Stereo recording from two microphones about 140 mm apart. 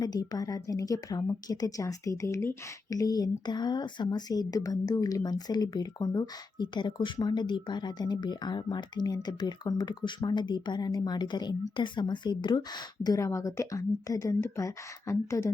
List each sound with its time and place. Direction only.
0.0 s a woman's voice: 30° left (ahead or behind)